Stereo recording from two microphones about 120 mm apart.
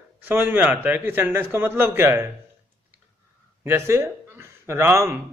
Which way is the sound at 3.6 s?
20° right (ahead or behind).